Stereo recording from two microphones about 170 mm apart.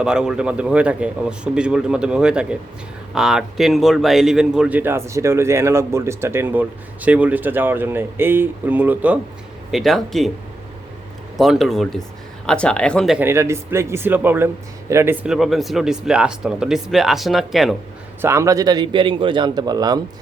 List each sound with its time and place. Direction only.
0.0 s speech: 5° right (ahead or behind)
9.7 s speech: centre (ahead or behind)
11.3 s speech: centre (ahead or behind)
13.1 s speech: 15° right (ahead or behind)
15.3 s speech: centre (ahead or behind)
18.2 s a man's voice: 15° right (ahead or behind)